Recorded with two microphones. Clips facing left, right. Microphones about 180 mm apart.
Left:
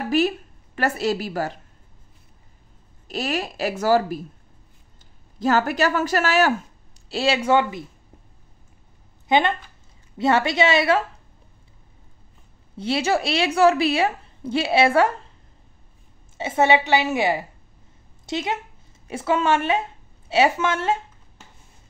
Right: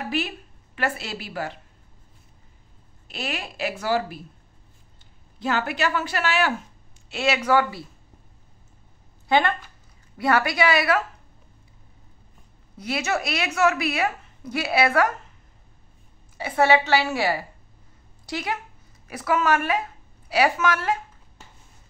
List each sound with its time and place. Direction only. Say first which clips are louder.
0.1 s speech: left 12 dB; 40° left (ahead or behind)
3.1 s speech: left 6 dB; 40° left (ahead or behind)
5.4 s a woman's voice: left 5 dB; 40° left (ahead or behind); by 7.8 s 25° left (ahead or behind)
9.3 s a woman's voice: left 2 dB; 20° left (ahead or behind)
12.7 s a woman's voice: left 4 dB; 30° left (ahead or behind)
16.3 s a woman's voice: left 1 dB; 20° left (ahead or behind)